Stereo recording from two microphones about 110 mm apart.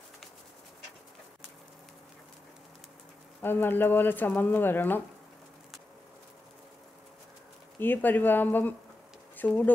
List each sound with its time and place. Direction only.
3.4 s speech: 20° left (ahead or behind)
7.8 s speech: 15° left (ahead or behind)